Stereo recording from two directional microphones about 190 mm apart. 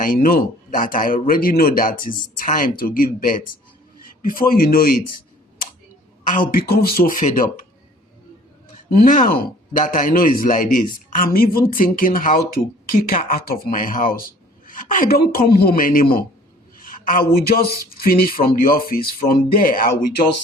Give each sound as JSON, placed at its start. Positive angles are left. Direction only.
{"t": 0.0, "sound": "speech", "side_deg": 50}
{"t": 6.2, "sound": "speech", "side_deg": 50}
{"t": 8.9, "sound": "speech", "side_deg": 45}